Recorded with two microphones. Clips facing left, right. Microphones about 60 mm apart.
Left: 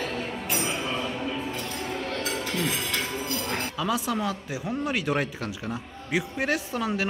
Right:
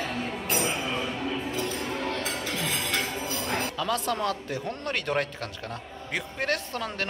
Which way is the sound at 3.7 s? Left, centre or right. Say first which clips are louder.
Left 1 dB; centre.